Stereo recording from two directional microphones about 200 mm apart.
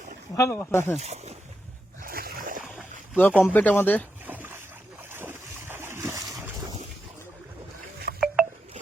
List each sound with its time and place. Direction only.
0.3 s speech: 15° left (ahead or behind)
0.9 s speech: 35° right (ahead or behind)
2.0 s a sound: 45° right (ahead or behind)
2.7 s boat: 10° left (ahead or behind)
3.4 s speech: 10° left (ahead or behind)
4.3 s boat: 10° right (ahead or behind)
8.1 s a sound: 50° right (ahead or behind)